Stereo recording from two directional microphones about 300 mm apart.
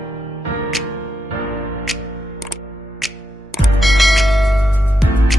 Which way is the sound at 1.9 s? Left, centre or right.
Centre.